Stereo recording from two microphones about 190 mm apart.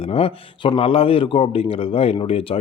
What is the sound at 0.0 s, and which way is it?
A man's voice, 30° left (ahead or behind).